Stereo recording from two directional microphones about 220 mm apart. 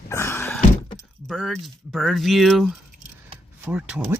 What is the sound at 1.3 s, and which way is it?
Speech, centre (ahead or behind).